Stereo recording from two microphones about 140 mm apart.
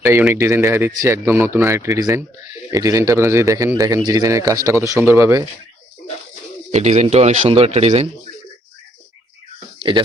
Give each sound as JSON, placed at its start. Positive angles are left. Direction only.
{"t": 0.0, "sound": "a man's voice", "side_deg": -15}
{"t": 6.7, "sound": "speech", "side_deg": -55}
{"t": 9.7, "sound": "a sound", "side_deg": -35}